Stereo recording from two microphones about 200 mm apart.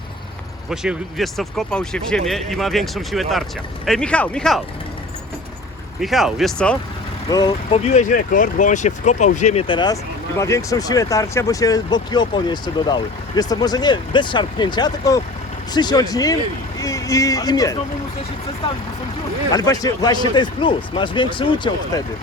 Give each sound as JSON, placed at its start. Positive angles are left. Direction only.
{"t": 0.7, "sound": "speech", "side_deg": 0}
{"t": 6.0, "sound": "speech", "side_deg": 0}
{"t": 7.3, "sound": "speech", "side_deg": 20}
{"t": 7.9, "sound": "speech", "side_deg": 40}
{"t": 19.5, "sound": "speech", "side_deg": 20}